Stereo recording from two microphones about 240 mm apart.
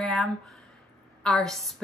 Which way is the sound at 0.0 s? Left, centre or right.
Centre.